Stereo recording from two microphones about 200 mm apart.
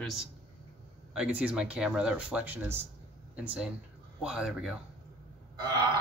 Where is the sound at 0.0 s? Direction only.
Centre (ahead or behind).